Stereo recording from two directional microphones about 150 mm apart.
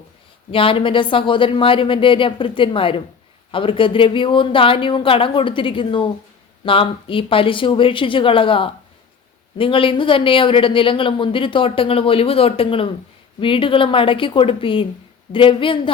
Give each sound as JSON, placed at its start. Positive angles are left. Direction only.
{"t": 0.5, "sound": "speech", "side_deg": 35}